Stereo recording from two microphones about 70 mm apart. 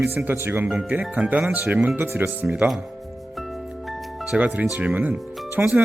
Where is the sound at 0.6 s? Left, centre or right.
Centre.